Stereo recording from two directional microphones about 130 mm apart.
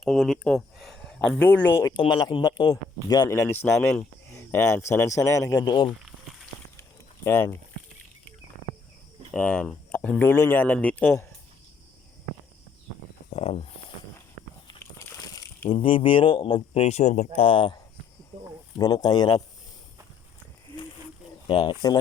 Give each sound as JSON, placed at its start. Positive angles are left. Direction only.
{"t": 0.0, "sound": "speech", "side_deg": 0}
{"t": 2.0, "sound": "a man's voice", "side_deg": 35}
{"t": 6.0, "sound": "a sound", "side_deg": 0}
{"t": 7.3, "sound": "speech", "side_deg": 15}
{"t": 9.3, "sound": "speech", "side_deg": 5}
{"t": 13.3, "sound": "speech", "side_deg": 50}
{"t": 15.7, "sound": "speech", "side_deg": 40}
{"t": 21.4, "sound": "speech", "side_deg": 35}